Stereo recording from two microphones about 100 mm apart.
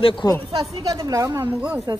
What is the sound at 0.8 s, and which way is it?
A woman's voice, 40° right (ahead or behind).